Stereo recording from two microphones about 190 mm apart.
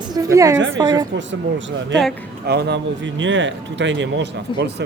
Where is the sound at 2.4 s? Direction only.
60° right (ahead or behind).